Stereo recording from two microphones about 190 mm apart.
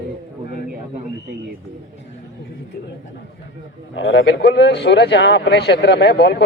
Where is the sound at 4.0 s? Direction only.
85° left; by 6.4 s 65° left (ahead or behind).